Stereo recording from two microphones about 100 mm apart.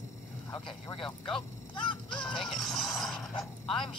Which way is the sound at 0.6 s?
55° left (ahead or behind).